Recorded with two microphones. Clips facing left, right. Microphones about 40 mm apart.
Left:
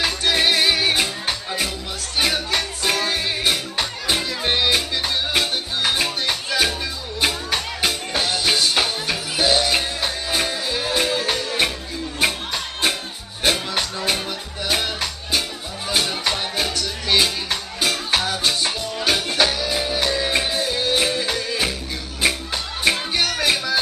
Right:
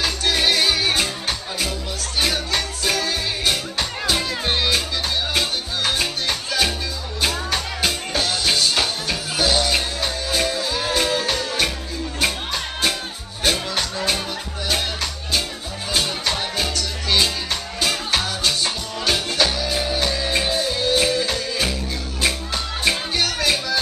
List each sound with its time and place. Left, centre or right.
0.0 s music: centre
13.4 s music: centre
22.8 s music: centre